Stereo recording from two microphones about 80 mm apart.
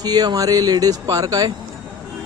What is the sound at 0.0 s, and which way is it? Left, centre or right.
Speech, right.